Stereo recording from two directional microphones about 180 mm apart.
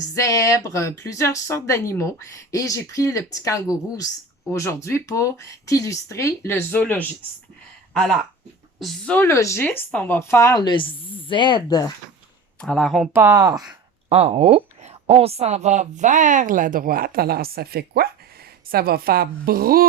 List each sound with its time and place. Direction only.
0.1 s speech: 15° left (ahead or behind)
8.8 s speech: 5° left (ahead or behind); by 11.9 s 25° left (ahead or behind)
12.5 s speech: centre (ahead or behind)
13.1 s speech: 20° right (ahead or behind)
14.1 s a woman's voice: 35° right (ahead or behind); by 19.9 s 55° right (ahead or behind)